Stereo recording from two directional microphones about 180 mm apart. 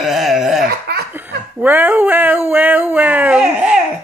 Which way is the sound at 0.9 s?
65° right (ahead or behind).